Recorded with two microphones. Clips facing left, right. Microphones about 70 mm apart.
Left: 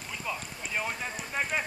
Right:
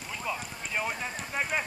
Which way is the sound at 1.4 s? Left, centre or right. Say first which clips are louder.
Even; centre.